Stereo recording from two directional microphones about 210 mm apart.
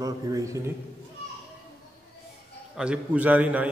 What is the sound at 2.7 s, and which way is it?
Speech, 5° right (ahead or behind).